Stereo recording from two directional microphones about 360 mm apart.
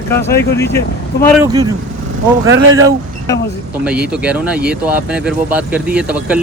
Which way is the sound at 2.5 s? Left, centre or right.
Right.